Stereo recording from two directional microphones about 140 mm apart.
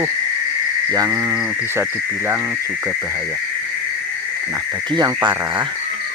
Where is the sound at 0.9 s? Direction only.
25° right (ahead or behind).